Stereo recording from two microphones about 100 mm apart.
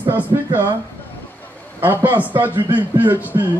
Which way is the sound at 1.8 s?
20° right (ahead or behind).